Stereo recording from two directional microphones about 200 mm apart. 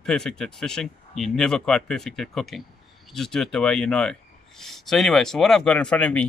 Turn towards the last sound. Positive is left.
turn(degrees=5)  # may be behind; listen again after turning